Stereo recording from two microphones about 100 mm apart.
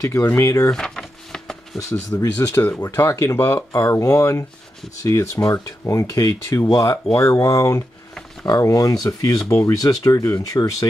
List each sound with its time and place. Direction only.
0.1 s speech: 20° left (ahead or behind)
0.4 s speech: 30° left (ahead or behind)
0.7 s a sound: 5° left (ahead or behind)
1.9 s speech: 35° left (ahead or behind)